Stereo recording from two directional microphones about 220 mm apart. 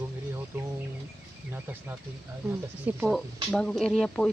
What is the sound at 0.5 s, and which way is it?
Insect, 10° right (ahead or behind).